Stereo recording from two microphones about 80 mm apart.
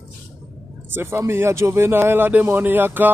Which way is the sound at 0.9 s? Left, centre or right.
Right.